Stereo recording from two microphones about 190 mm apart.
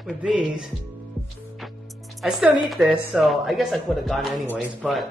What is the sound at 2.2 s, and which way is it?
Speech, 5° right (ahead or behind).